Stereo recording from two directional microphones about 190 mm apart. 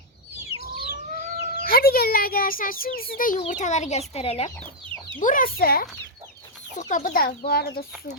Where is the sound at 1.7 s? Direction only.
55° left (ahead or behind); by 4.5 s 30° left (ahead or behind).